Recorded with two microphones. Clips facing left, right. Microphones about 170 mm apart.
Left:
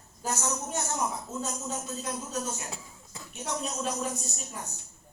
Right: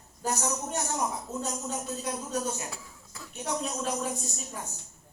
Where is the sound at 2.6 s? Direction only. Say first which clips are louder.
Even; 20° left (ahead or behind).